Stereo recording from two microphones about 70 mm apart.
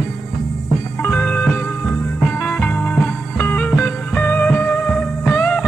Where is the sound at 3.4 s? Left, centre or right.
Left.